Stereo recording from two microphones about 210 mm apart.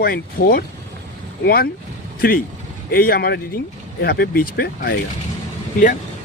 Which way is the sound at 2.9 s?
45° left (ahead or behind).